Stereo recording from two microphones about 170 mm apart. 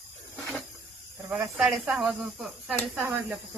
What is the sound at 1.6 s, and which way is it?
Speech, 5° right (ahead or behind).